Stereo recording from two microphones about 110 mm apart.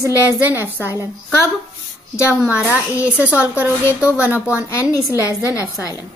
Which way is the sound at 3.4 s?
15° right (ahead or behind).